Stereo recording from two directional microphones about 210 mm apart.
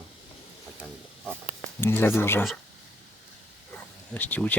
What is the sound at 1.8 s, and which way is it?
Speech, 10° left (ahead or behind).